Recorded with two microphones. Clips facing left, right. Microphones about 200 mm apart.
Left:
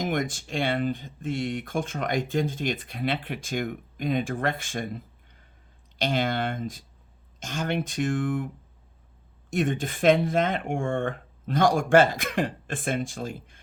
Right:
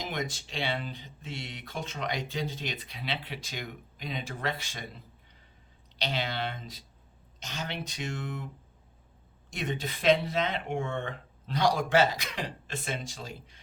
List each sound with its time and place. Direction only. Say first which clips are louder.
0.0 s speech: left 7 dB; 50° left (ahead or behind)
9.5 s speech: left 8 dB; 50° left (ahead or behind)